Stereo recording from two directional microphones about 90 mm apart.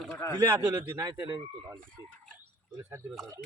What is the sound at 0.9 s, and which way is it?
Speech, 45° right (ahead or behind).